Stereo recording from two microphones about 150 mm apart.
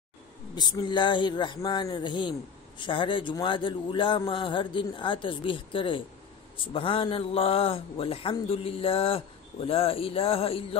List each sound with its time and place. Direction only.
0.6 s speech: 30° left (ahead or behind)